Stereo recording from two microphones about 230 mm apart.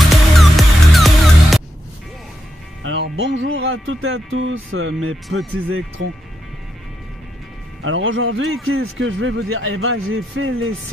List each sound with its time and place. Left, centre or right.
0.1 s music: centre
2.8 s speech: right
7.8 s speech: right